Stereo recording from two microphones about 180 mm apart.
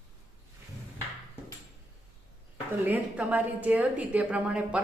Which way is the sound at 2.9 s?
10° right (ahead or behind).